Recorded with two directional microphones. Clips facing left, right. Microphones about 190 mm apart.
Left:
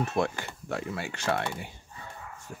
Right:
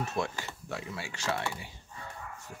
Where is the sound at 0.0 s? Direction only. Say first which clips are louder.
Left 5 dB; 55° left (ahead or behind).